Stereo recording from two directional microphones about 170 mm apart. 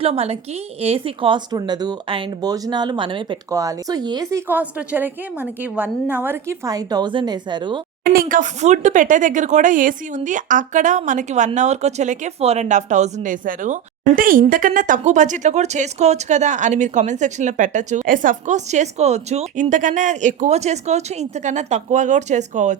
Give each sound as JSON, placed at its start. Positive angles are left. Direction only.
{"t": 0.0, "sound": "a woman's voice", "side_deg": -35}
{"t": 8.1, "sound": "speech", "side_deg": -55}